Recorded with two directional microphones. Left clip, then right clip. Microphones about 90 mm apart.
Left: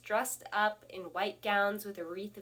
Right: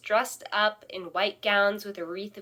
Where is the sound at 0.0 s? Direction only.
15° right (ahead or behind).